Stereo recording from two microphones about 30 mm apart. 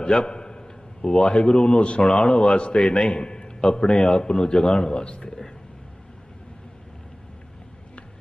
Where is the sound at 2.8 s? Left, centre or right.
Left.